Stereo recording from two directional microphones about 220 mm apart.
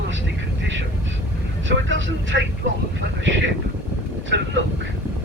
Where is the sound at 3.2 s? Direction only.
60° right (ahead or behind).